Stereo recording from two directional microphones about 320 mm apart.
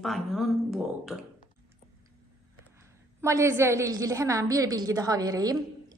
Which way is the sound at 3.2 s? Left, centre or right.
Centre.